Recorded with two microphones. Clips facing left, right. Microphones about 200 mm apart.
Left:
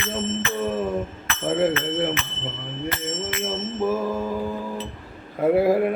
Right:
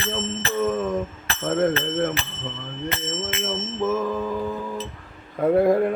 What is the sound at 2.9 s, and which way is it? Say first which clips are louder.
Speech: right 1 dB; 25° right (ahead or behind).